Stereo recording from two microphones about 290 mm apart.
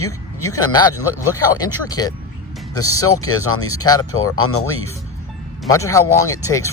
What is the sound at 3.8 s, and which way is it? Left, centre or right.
Speech, centre.